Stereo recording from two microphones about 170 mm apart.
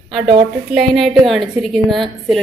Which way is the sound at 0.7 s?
Centre (ahead or behind).